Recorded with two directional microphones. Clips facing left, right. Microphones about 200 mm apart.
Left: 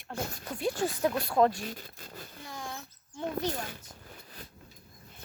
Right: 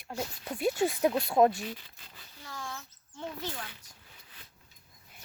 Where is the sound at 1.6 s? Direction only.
45° left (ahead or behind).